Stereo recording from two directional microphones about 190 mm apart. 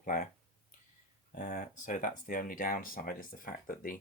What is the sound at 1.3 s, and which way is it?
Speech, 40° left (ahead or behind).